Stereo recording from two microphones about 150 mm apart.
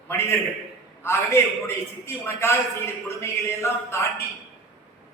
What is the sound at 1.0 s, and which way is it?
A man's voice, 15° left (ahead or behind).